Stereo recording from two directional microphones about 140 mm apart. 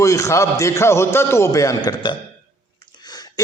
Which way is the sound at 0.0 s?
20° left (ahead or behind).